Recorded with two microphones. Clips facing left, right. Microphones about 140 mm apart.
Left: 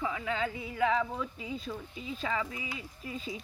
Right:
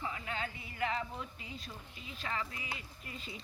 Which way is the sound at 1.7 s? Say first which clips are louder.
Left 10 dB; 90° left.